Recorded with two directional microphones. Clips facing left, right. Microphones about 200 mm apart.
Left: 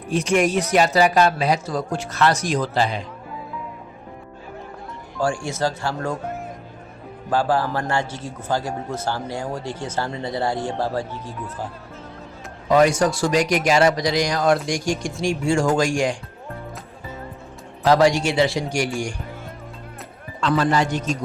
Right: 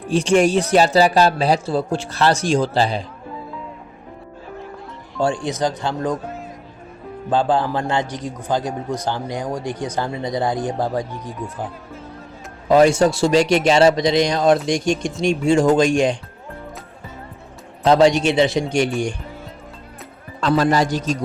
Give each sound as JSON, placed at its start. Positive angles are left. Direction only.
{"t": 0.1, "sound": "speech", "side_deg": -30}
{"t": 5.2, "sound": "a man's voice", "side_deg": -20}
{"t": 7.3, "sound": "a man's voice", "side_deg": -20}
{"t": 12.6, "sound": "a man's voice", "side_deg": -25}
{"t": 17.8, "sound": "a man's voice", "side_deg": -20}
{"t": 20.4, "sound": "speech", "side_deg": -40}